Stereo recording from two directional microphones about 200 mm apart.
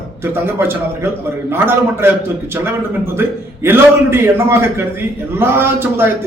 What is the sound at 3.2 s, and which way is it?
A man's voice, 10° right (ahead or behind).